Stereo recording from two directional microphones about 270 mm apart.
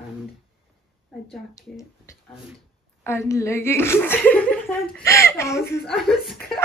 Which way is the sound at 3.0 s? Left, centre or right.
Centre.